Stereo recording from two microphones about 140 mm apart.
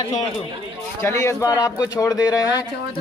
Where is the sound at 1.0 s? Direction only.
20° left (ahead or behind).